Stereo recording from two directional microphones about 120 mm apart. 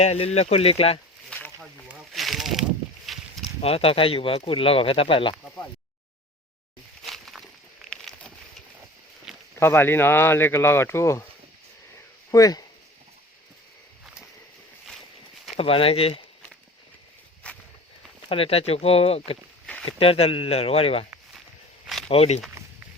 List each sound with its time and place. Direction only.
0.0 s speech: 65° left (ahead or behind)
1.3 s a sound: 10° left (ahead or behind)
3.6 s speech: 55° left (ahead or behind)
7.0 s a sound: centre (ahead or behind)
9.6 s speech: 20° left (ahead or behind)
12.3 s speech: 30° left (ahead or behind)
15.5 s speech: 50° left (ahead or behind)
17.5 s walk: 10° left (ahead or behind)
18.3 s speech: 55° left (ahead or behind)
22.1 s speech: 60° left (ahead or behind)
22.6 s a sound: 25° right (ahead or behind)